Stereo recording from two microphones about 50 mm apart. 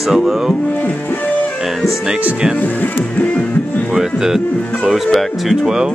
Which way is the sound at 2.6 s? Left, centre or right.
Left.